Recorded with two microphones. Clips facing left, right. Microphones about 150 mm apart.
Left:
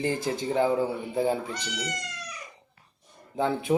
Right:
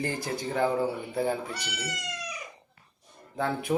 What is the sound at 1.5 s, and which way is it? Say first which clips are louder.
Speech: left 2 dB; 5° right (ahead or behind).